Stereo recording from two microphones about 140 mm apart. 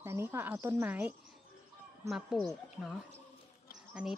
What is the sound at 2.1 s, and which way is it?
Speech, centre (ahead or behind).